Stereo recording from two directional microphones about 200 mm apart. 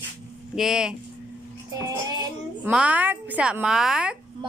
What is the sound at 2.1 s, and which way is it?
Child singing, 20° right (ahead or behind).